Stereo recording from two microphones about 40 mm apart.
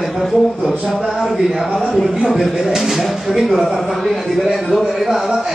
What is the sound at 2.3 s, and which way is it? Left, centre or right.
Speech, centre.